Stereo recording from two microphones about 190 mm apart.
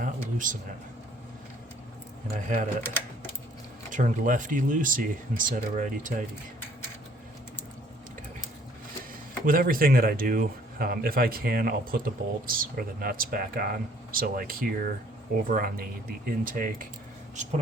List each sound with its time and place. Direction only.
0.0 s a sound: 45° right (ahead or behind)
2.3 s speech: 40° right (ahead or behind)
3.9 s speech: 45° right (ahead or behind)
9.5 s speech: 50° right (ahead or behind)